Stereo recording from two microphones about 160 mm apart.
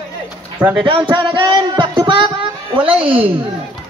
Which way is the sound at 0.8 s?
35° right (ahead or behind).